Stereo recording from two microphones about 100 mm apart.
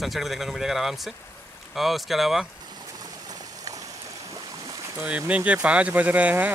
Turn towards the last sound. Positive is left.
turn(degrees=-15)  # may be behind; listen again after turning